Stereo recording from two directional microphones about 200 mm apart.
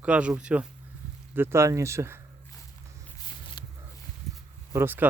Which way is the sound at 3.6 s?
20° left (ahead or behind).